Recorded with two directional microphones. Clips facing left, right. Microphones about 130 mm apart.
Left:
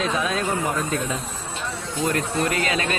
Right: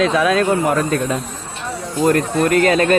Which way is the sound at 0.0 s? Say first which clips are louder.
Right 9 dB; 85° right.